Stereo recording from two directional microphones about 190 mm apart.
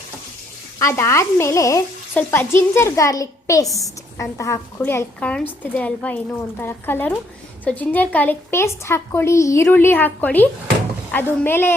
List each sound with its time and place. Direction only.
0.8 s frying: 15° left (ahead or behind)